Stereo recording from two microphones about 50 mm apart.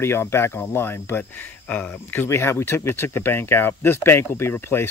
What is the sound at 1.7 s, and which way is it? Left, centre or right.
Speech, left.